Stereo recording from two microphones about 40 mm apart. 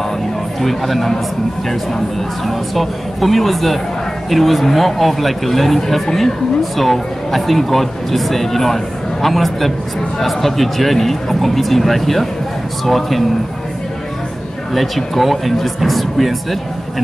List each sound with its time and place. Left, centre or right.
0.6 s speech: centre
2.4 s speech: centre
14.7 s speech: centre